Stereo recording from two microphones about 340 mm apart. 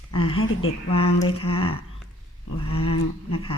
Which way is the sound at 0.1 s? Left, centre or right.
Centre.